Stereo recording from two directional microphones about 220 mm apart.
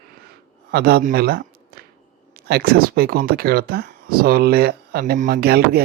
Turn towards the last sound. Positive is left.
turn(degrees=-45)  # may be behind; listen again after turning